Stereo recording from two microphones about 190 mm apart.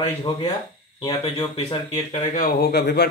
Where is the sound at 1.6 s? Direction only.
30° left (ahead or behind).